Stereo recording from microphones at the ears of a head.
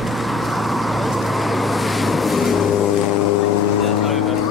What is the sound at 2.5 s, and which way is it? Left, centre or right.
Vehicle, left.